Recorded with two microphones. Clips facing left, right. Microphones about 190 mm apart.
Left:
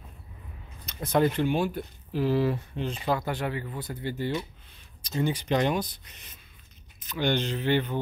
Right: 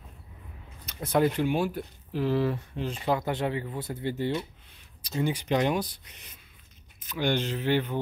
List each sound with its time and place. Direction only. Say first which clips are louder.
0.8 s speech: even; 10° right (ahead or behind)
2.2 s speech: left 1 dB; 10° left (ahead or behind)
3.1 s speech: right 2 dB; 20° right (ahead or behind)
5.0 s speech: left 1 dB; 10° right (ahead or behind)